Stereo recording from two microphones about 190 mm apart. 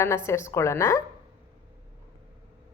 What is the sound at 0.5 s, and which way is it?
Speech, 15° left (ahead or behind).